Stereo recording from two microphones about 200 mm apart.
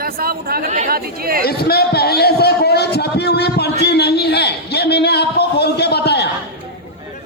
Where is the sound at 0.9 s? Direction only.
50° right (ahead or behind).